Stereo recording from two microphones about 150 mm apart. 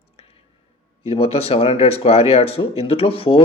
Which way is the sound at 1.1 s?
40° left (ahead or behind).